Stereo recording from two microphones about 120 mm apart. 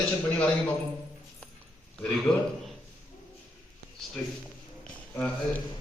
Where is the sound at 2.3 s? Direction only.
5° left (ahead or behind).